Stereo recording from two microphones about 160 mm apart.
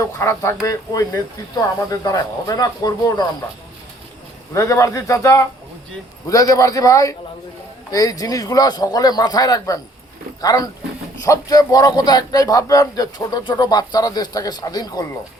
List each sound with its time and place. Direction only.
0.0 s a man's voice: 15° left (ahead or behind)
4.5 s a man's voice: 20° left (ahead or behind)